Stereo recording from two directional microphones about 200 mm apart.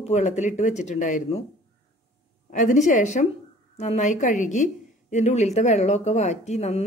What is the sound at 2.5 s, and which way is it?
A woman's voice, 40° left (ahead or behind).